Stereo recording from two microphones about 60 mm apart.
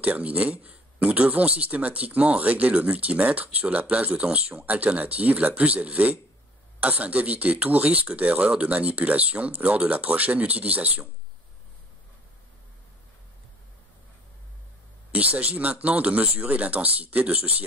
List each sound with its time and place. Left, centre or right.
0.0 s a man's voice: right
15.1 s a man's voice: right